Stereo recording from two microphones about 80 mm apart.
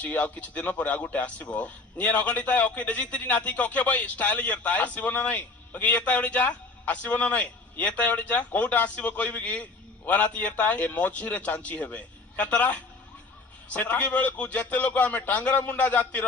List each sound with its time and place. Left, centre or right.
0.0 s a man's voice: centre